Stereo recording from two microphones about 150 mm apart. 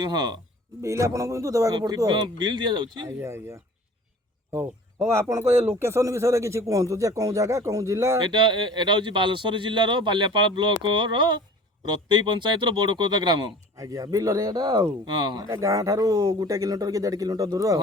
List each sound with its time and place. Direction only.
0.0 s speech: 25° right (ahead or behind)
3.2 s speech: 15° right (ahead or behind)
5.5 s speech: 45° right (ahead or behind)
5.7 s speech: 20° right (ahead or behind)
8.2 s speech: 30° right (ahead or behind)